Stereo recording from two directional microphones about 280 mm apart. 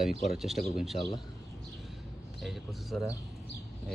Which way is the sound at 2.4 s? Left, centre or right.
Centre.